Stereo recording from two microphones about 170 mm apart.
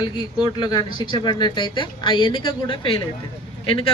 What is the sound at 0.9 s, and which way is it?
Speech, 25° left (ahead or behind).